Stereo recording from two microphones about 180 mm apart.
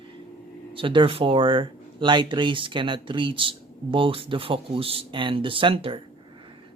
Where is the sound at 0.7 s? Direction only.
30° right (ahead or behind).